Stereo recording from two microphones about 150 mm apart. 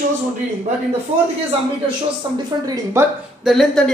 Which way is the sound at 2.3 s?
25° right (ahead or behind).